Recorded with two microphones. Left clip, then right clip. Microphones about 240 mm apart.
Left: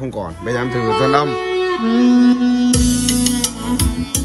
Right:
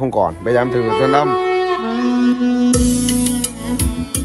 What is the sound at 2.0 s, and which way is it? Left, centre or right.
Music, left.